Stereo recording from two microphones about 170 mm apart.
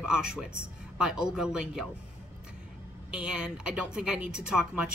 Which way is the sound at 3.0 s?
5° right (ahead or behind).